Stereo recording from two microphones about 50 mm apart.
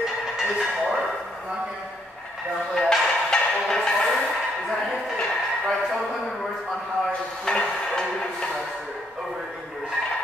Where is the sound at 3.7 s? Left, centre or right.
Centre.